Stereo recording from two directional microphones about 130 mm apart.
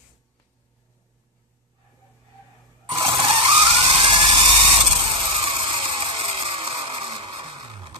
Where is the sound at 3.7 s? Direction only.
45° right (ahead or behind).